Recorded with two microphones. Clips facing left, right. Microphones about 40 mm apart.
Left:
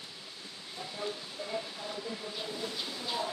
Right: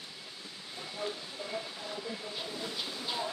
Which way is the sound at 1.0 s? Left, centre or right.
Centre.